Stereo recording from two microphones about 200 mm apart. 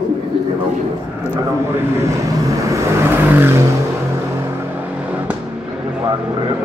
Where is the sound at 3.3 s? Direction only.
10° right (ahead or behind).